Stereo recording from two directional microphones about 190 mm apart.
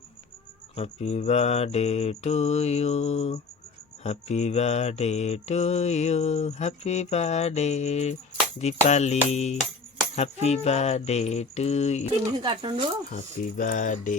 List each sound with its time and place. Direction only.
0.8 s mantra: 35° left (ahead or behind)
12.2 s speech: 20° right (ahead or behind)
13.1 s speech: 45° left (ahead or behind)